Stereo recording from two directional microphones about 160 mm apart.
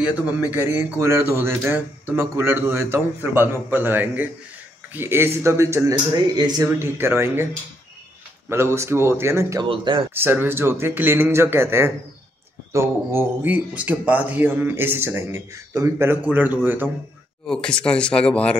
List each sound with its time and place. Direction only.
0.0 s speech: 10° right (ahead or behind)
8.5 s speech: 15° right (ahead or behind)
9.7 s speech: 30° right (ahead or behind)
10.1 s speech: 15° right (ahead or behind)
17.5 s speech: 5° left (ahead or behind)